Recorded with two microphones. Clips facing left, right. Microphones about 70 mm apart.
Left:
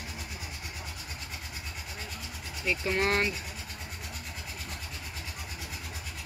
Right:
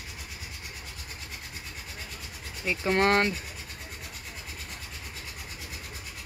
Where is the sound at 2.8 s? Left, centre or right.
Right.